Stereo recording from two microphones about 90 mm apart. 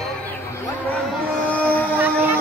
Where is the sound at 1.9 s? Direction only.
20° right (ahead or behind).